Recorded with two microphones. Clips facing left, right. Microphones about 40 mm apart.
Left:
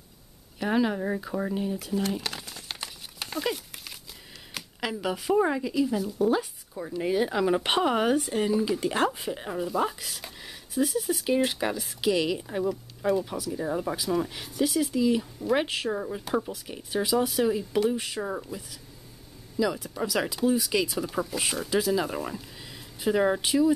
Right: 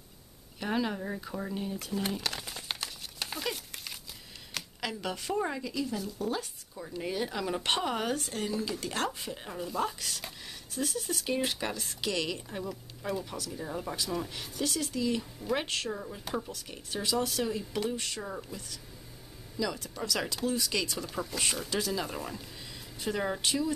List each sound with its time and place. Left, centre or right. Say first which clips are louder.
0.6 s speech: left 6 dB; centre
2.4 s crumpling: right 1 dB; centre
2.8 s crumpling: left 1 dB; centre
4.7 s speech: left 6 dB; centre
15.9 s speech: left 7 dB; left
16.3 s speech: left 7 dB; centre
19.5 s speech: left 7 dB; centre